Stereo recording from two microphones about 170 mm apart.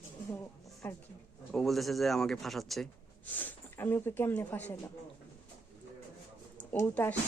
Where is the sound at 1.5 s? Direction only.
Centre (ahead or behind).